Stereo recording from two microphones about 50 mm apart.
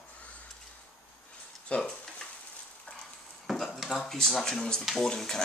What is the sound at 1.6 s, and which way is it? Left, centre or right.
Speech, left.